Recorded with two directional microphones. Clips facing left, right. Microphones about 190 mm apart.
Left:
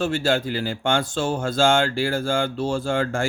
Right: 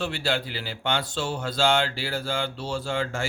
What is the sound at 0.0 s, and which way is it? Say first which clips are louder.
Speech: left 6 dB; 45° left (ahead or behind).